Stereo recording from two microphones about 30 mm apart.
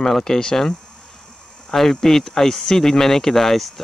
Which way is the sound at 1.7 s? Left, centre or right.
Centre.